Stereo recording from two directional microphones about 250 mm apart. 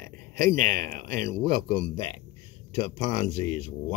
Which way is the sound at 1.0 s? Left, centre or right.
Centre.